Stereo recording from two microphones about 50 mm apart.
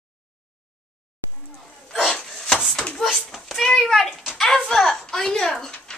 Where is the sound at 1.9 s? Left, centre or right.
Centre.